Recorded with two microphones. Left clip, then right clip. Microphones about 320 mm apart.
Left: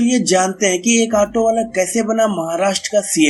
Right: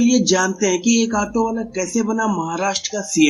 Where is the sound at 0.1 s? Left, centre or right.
Centre.